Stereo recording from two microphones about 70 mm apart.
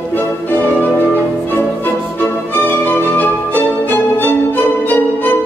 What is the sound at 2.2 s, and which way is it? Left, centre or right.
Music, left.